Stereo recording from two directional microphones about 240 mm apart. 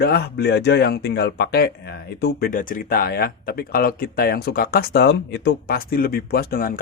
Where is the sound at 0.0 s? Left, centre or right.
Left.